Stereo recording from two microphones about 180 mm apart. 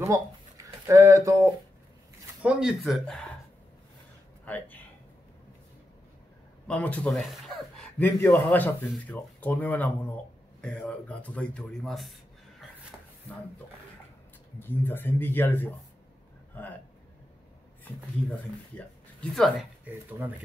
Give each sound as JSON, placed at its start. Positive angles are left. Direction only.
{"t": 0.0, "sound": "speech", "side_deg": -15}
{"t": 2.4, "sound": "a man's voice", "side_deg": -5}
{"t": 4.5, "sound": "speech", "side_deg": 10}
{"t": 6.7, "sound": "a man's voice", "side_deg": 5}
{"t": 13.3, "sound": "speech", "side_deg": 10}
{"t": 14.6, "sound": "speech", "side_deg": 10}
{"t": 17.8, "sound": "speech", "side_deg": 10}
{"t": 20.1, "sound": "speech", "side_deg": -10}